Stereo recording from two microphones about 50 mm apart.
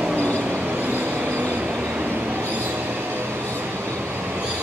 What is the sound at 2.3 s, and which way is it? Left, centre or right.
Train, right.